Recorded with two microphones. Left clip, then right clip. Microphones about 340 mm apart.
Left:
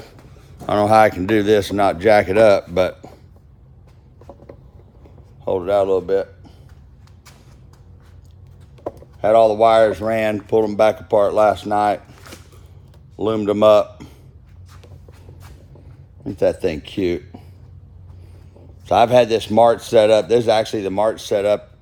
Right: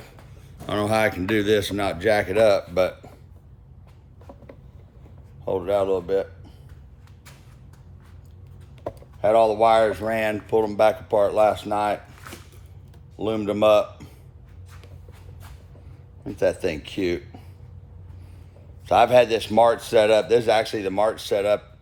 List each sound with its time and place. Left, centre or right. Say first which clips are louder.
0.7 s speech: left 9 dB; centre
5.5 s speech: left 5 dB; left
9.2 s speech: left 5 dB; left
13.1 s speech: left 6 dB; left
16.2 s speech: left 4 dB; left
18.9 s speech: left 3 dB; left